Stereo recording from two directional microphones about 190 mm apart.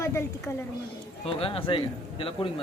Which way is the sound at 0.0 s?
15° left (ahead or behind).